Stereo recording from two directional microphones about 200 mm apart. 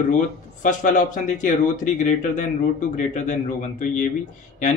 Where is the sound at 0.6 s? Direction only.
40° left (ahead or behind).